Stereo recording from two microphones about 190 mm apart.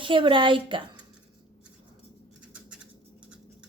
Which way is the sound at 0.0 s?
25° right (ahead or behind).